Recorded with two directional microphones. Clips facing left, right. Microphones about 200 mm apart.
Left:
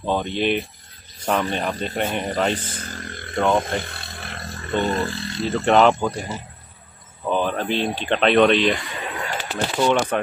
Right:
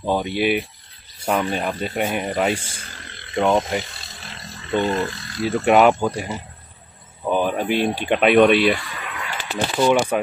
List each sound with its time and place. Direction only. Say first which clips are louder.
0.0 s speech: right 1 dB; 10° right (ahead or behind)
2.7 s wild animals: left 7 dB; 50° left (ahead or behind)
3.3 s speech: right 1 dB; 10° right (ahead or behind)
3.8 s roar: left 5 dB; 55° left (ahead or behind)
4.8 s speech: right 1 dB; 35° left (ahead or behind)
5.4 s speech: right 1 dB; 10° right (ahead or behind)
8.8 s a sound: left 3 dB; 25° left (ahead or behind)
9.8 s speech: right 2 dB; 5° right (ahead or behind)